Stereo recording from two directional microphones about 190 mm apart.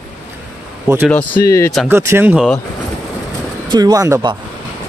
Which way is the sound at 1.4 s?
15° left (ahead or behind).